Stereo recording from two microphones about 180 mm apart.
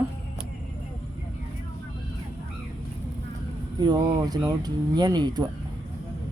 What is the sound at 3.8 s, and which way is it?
Speech, 20° right (ahead or behind).